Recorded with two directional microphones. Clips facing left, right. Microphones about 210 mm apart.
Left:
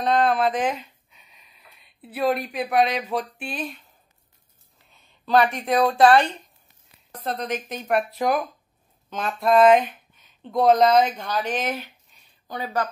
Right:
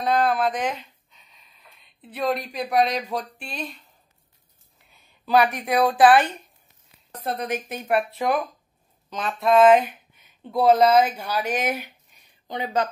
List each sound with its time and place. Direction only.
0.0 s speech: 5° right (ahead or behind)
0.5 s a sound: 5° left (ahead or behind)
2.0 s speech: 5° left (ahead or behind)
5.2 s speech: 5° right (ahead or behind)
7.2 s speech: 10° right (ahead or behind)
12.4 s speech: 20° right (ahead or behind)